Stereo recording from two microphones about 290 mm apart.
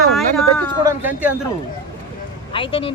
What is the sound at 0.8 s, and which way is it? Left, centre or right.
Speech, centre.